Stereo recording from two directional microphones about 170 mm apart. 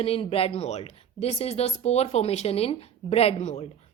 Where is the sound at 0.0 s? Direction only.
35° left (ahead or behind).